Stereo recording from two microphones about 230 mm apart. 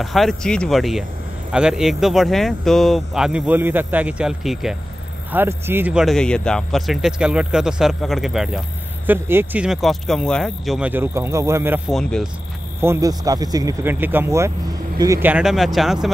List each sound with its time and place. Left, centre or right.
0.0 s speech: centre
11.9 s speech: centre
12.8 s speech: centre
15.2 s speech: centre